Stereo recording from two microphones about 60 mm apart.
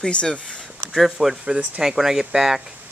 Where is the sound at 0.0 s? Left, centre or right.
Centre.